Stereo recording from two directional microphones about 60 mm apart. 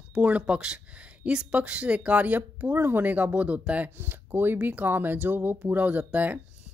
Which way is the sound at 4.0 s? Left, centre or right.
Right.